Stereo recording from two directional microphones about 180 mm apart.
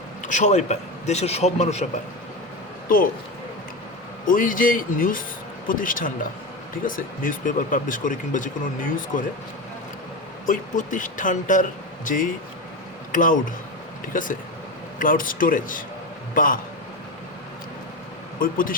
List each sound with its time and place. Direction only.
0.3 s a man's voice: 45° left (ahead or behind)
4.3 s speech: 50° left (ahead or behind)
10.4 s a man's voice: 45° left (ahead or behind)
18.3 s speech: 50° left (ahead or behind)